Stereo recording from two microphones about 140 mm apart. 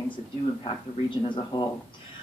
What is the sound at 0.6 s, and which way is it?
A man's voice, 35° left (ahead or behind).